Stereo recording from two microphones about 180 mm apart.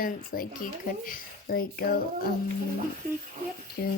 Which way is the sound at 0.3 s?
55° left (ahead or behind).